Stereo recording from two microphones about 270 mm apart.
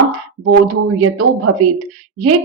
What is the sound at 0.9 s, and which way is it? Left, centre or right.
Speech, right.